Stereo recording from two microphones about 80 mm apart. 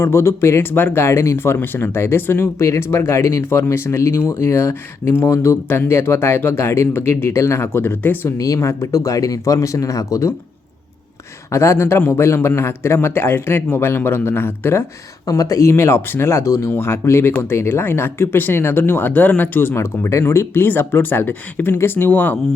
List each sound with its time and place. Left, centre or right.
0.0 s speech: left
8.4 s speech: left
11.5 s speech: left
15.3 s speech: left
15.7 s speech: left